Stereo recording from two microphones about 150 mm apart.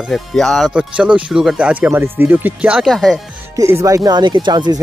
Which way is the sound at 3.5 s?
20° right (ahead or behind).